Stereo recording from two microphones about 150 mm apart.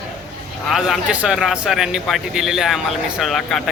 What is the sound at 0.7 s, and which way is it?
A man's voice, 5° right (ahead or behind).